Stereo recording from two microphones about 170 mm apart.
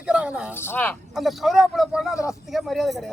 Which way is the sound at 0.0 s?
5° right (ahead or behind).